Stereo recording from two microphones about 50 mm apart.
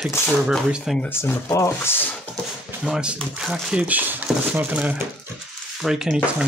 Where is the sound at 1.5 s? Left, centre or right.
Left.